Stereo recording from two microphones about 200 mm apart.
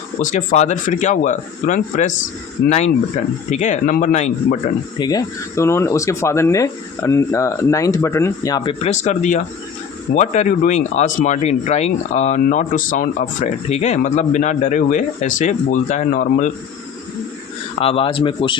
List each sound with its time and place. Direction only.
0.2 s speech: 40° left (ahead or behind)
4.9 s speech: 20° left (ahead or behind)
8.8 s speech: 35° left (ahead or behind)
17.7 s speech: 30° left (ahead or behind)